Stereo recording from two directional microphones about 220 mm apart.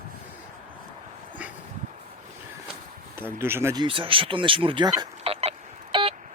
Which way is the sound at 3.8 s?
25° right (ahead or behind).